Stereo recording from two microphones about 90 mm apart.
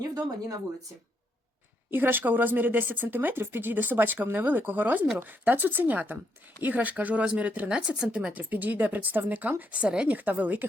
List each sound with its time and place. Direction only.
0.1 s speech: 40° right (ahead or behind)
1.9 s speech: 25° right (ahead or behind)